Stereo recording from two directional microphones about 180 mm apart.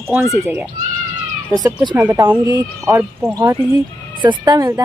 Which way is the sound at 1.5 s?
20° right (ahead or behind).